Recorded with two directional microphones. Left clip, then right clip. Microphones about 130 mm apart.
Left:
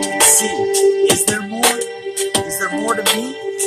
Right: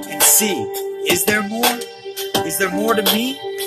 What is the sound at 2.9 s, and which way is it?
Music, 10° left (ahead or behind).